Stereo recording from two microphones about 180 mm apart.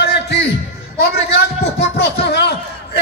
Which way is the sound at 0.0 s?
70° left (ahead or behind).